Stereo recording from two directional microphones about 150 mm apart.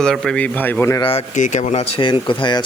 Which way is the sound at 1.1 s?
55° left (ahead or behind).